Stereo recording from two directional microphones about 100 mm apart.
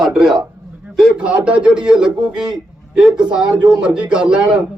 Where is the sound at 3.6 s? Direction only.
10° right (ahead or behind).